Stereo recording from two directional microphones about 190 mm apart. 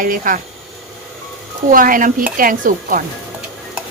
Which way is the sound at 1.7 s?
45° right (ahead or behind).